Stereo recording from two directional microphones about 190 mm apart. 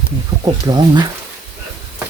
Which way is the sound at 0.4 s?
20° right (ahead or behind).